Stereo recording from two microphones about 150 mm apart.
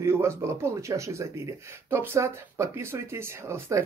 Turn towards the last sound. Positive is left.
turn(degrees=-20)  # may be behind; listen again after turning